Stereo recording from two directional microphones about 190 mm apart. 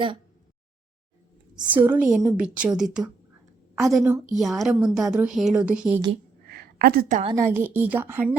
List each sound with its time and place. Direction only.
1.6 s a woman's voice: 10° right (ahead or behind)
6.5 s a sound: 55° right (ahead or behind)
7.3 s a woman's voice: 15° right (ahead or behind)